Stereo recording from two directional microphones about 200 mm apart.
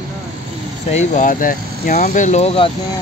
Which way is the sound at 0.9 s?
40° left (ahead or behind).